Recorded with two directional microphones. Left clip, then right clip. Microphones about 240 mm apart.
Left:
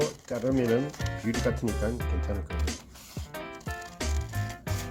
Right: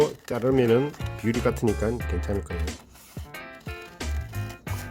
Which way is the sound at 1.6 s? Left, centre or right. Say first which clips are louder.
Right 6 dB; centre.